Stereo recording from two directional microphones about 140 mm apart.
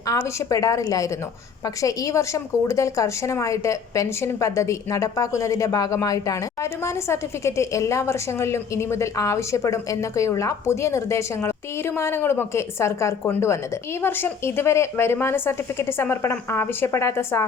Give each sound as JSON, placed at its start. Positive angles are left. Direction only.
{"t": 0.1, "sound": "a woman's voice", "side_deg": 20}